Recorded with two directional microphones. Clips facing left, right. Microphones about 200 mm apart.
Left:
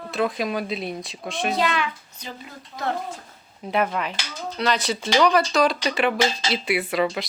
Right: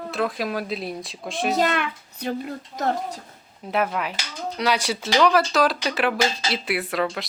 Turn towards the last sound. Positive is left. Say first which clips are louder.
# left 2 dB
turn(degrees=0)  # may be behind; listen again after turning